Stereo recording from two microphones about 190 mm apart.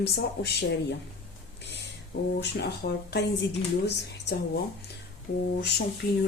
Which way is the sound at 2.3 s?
60° left (ahead or behind).